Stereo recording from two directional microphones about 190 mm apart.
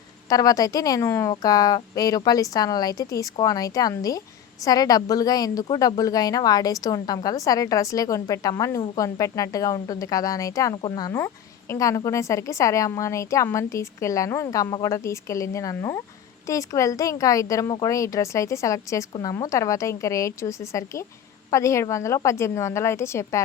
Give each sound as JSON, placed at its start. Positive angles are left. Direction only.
{"t": 0.3, "sound": "a woman's voice", "side_deg": 20}